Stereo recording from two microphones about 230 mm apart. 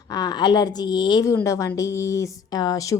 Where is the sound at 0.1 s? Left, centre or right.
Centre.